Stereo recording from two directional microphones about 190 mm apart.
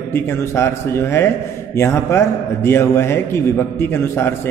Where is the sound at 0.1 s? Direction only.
15° left (ahead or behind).